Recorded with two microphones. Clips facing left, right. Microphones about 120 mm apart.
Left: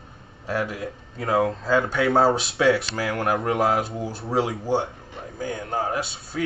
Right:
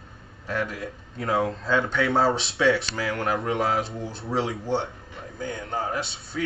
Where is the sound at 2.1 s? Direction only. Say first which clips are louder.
Left 4 dB; 25° left (ahead or behind).